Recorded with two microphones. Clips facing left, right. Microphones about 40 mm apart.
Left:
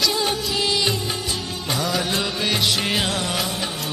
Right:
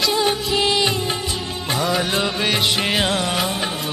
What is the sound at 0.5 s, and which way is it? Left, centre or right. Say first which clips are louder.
Music: right 3 dB; right.